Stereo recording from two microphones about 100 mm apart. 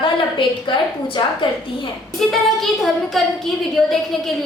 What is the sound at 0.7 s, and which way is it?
Speech, 55° left (ahead or behind).